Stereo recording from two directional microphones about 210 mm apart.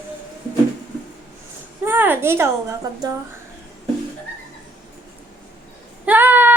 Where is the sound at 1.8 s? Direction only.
10° right (ahead or behind).